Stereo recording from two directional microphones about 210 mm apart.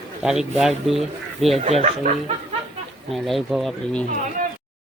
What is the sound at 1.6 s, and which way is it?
Speech, 30° right (ahead or behind).